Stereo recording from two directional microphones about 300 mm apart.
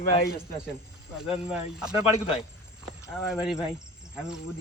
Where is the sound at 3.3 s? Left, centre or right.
Centre.